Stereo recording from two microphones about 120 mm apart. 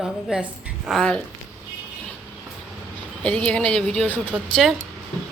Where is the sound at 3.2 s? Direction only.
10° left (ahead or behind).